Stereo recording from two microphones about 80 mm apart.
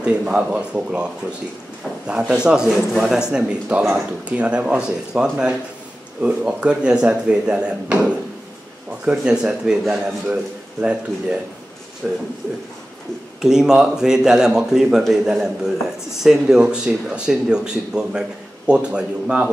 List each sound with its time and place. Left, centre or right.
0.0 s a man's voice: centre
13.4 s a man's voice: centre